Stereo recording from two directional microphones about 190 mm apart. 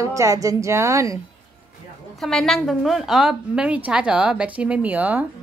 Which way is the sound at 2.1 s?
Centre (ahead or behind).